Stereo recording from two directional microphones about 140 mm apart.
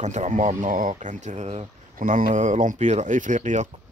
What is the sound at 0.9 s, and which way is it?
Speech, 60° right (ahead or behind).